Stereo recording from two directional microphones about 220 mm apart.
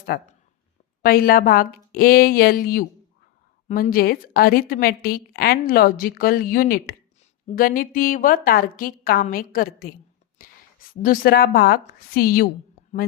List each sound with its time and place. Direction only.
0.0 s a woman's voice: 45° left (ahead or behind)
10.4 s a sound: 40° left (ahead or behind)
10.9 s a woman's voice: 40° left (ahead or behind)